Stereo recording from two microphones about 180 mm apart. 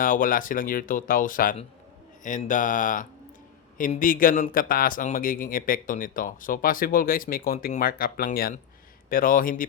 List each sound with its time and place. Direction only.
0.0 s speech: 50° left (ahead or behind)